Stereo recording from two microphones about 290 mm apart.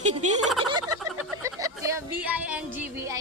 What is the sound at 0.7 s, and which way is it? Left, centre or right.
Speech, centre.